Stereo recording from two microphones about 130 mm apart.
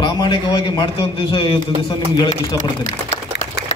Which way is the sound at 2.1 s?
30° left (ahead or behind).